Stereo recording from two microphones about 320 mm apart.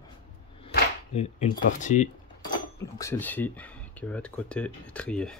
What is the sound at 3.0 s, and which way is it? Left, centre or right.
Speech, centre.